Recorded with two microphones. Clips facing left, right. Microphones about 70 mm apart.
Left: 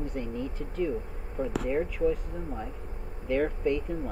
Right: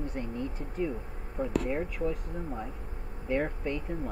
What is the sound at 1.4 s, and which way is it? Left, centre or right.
Speech, right.